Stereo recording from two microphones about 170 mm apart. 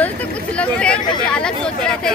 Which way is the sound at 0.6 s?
5° left (ahead or behind).